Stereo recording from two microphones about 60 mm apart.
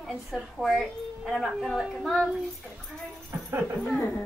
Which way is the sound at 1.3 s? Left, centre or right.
Centre.